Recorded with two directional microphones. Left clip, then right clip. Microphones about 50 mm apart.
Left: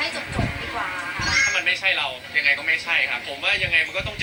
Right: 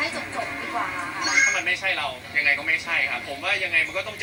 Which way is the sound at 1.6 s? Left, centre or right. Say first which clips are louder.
Left 3 dB; centre.